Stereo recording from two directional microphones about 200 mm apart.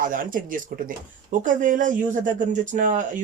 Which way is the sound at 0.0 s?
40° right (ahead or behind).